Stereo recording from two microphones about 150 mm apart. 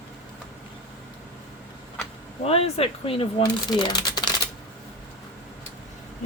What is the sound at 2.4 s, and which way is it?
Speech, 40° left (ahead or behind).